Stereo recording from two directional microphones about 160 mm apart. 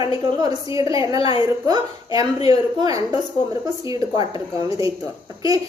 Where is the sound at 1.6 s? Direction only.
25° right (ahead or behind).